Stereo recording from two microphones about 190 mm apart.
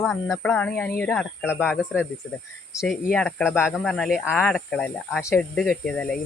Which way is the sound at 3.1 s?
5° left (ahead or behind).